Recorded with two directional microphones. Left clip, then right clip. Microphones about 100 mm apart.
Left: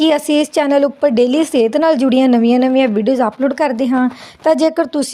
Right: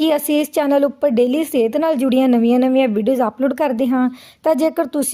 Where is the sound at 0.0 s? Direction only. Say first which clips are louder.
Left 3 dB; 25° left (ahead or behind).